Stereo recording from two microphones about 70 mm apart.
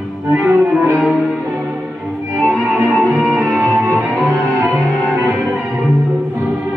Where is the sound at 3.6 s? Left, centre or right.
Right.